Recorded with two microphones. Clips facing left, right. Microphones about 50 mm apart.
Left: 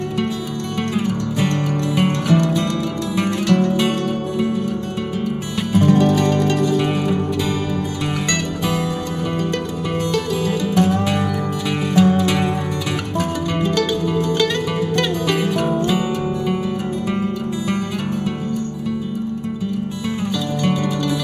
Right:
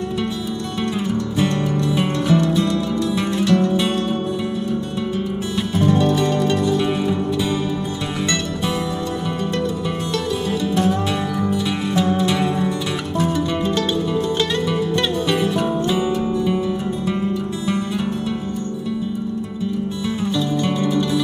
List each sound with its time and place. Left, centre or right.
2.0 s music: left
8.3 s music: left